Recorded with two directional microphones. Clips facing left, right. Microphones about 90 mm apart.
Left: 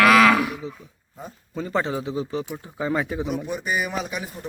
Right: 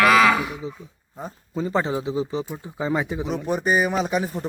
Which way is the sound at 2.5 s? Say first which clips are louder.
Right 1 dB; 5° right (ahead or behind).